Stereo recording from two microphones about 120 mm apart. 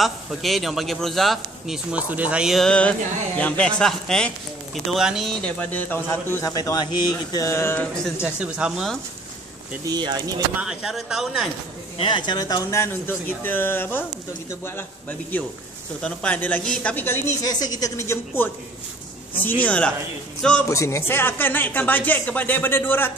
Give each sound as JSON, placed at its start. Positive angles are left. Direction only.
{"t": 0.0, "sound": "speech", "side_deg": 0}
{"t": 5.3, "sound": "speech", "side_deg": 15}
{"t": 6.4, "sound": "speech", "side_deg": 30}
{"t": 8.2, "sound": "speech", "side_deg": -10}
{"t": 9.8, "sound": "speech", "side_deg": -35}
{"t": 10.5, "sound": "speech", "side_deg": -5}
{"t": 12.0, "sound": "speech", "side_deg": 40}
{"t": 17.4, "sound": "speech", "side_deg": 35}
{"t": 20.6, "sound": "speech", "side_deg": 25}